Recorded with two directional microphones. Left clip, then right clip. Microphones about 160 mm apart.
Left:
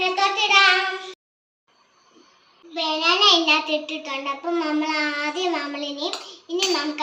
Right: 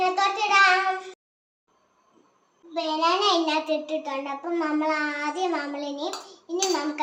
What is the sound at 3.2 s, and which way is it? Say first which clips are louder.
A child's voice: left 5 dB; 25° right (ahead or behind).